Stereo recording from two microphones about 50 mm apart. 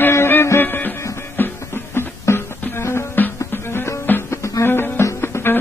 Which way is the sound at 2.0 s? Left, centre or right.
Left.